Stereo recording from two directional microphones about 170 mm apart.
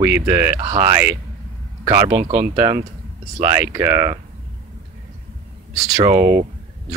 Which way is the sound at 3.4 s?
15° right (ahead or behind).